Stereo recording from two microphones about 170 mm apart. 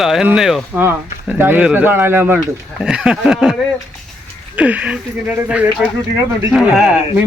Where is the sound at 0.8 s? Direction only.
15° right (ahead or behind).